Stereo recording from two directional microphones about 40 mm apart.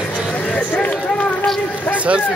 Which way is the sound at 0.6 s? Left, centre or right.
Left.